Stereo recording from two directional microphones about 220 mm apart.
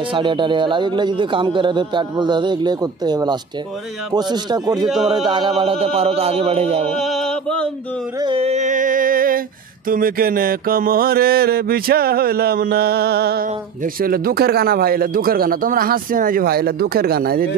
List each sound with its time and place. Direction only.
0.1 s a man's voice: 20° right (ahead or behind)
4.8 s speech: centre (ahead or behind)
5.2 s a man's voice: 20° right (ahead or behind)
6.9 s chant: centre (ahead or behind)
8.2 s a sound: 25° right (ahead or behind)
9.8 s mantra: 40° right (ahead or behind)